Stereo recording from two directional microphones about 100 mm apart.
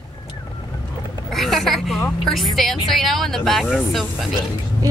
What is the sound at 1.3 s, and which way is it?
Speech, centre (ahead or behind).